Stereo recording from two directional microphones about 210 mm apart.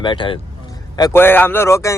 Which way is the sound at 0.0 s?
20° left (ahead or behind).